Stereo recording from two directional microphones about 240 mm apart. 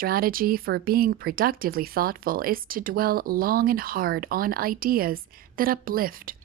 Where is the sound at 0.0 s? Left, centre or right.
Right.